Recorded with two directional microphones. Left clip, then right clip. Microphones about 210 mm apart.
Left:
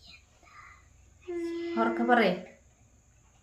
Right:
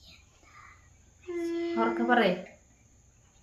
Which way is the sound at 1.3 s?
10° right (ahead or behind).